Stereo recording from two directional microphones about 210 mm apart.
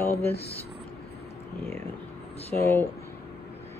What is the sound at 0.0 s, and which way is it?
Speech, 10° left (ahead or behind).